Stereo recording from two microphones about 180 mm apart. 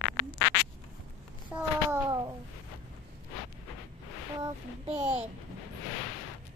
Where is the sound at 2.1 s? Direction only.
20° right (ahead or behind).